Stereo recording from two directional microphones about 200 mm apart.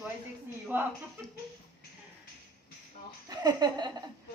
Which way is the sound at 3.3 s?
20° right (ahead or behind).